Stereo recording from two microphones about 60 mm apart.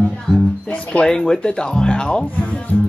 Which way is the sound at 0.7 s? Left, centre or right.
Centre.